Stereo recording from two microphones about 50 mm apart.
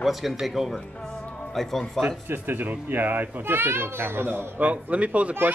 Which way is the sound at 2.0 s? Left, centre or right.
Right.